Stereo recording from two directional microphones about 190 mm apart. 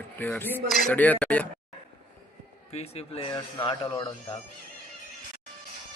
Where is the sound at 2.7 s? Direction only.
30° left (ahead or behind).